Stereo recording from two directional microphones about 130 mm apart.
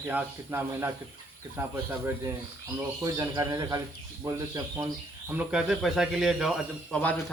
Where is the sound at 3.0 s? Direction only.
25° right (ahead or behind).